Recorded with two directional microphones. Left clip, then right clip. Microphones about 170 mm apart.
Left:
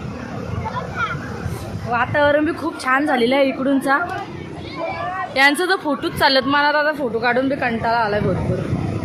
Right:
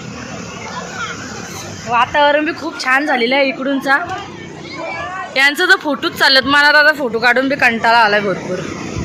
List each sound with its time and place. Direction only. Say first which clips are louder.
1.9 s a woman's voice: right 4 dB; 10° left (ahead or behind)
5.3 s a man's voice: right 5 dB; 10° left (ahead or behind); by 8.2 s 10° right (ahead or behind)